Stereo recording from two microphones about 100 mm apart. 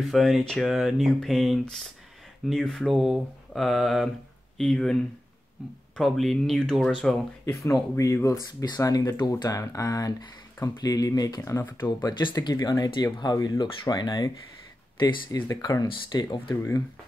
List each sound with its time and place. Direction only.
0.1 s speech: centre (ahead or behind)
5.9 s speech: centre (ahead or behind)
7.9 s speech: 30° left (ahead or behind)
12.0 s speech: 50° left (ahead or behind)
15.0 s speech: 55° left (ahead or behind)
15.4 s speech: 35° left (ahead or behind)